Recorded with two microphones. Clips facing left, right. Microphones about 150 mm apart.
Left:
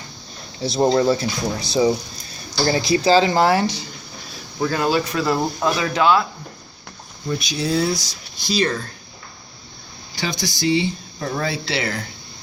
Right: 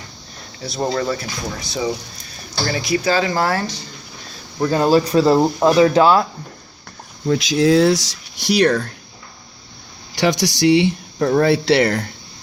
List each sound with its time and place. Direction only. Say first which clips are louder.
0.8 s speech: left 4 dB; 25° left (ahead or behind)
4.7 s speech: right 7 dB; 35° right (ahead or behind)
7.3 s speech: right 8 dB; 90° right; by 8.9 s 75° right (ahead or behind)
10.2 s speech: right 8 dB; 75° right (ahead or behind); by 12.0 s 60° right (ahead or behind)